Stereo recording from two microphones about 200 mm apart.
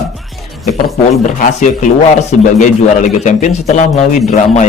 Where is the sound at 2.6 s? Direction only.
40° left (ahead or behind).